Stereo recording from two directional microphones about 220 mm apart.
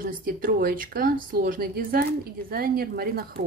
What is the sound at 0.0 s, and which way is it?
Speech, 40° right (ahead or behind).